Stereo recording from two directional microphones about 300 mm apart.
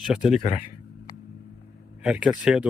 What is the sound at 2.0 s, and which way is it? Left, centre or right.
Speech, centre.